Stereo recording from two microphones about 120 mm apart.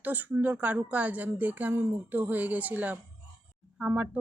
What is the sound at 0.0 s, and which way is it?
Speech, 15° right (ahead or behind).